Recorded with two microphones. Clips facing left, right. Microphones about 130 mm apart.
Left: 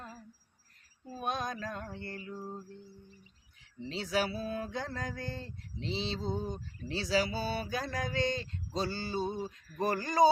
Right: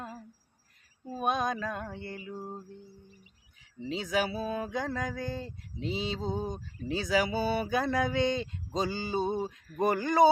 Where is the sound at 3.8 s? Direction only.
15° right (ahead or behind).